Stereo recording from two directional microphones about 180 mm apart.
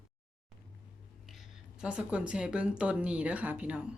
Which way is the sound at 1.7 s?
5° right (ahead or behind).